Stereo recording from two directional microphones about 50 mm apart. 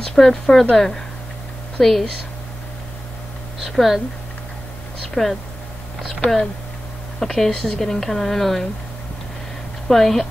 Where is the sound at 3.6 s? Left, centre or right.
Centre.